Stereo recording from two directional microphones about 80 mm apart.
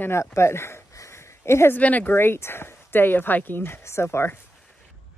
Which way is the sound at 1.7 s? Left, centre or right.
Left.